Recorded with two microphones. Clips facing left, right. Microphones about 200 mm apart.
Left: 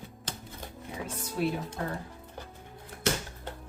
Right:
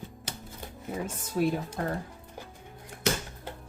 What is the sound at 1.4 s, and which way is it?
Speech, 45° right (ahead or behind).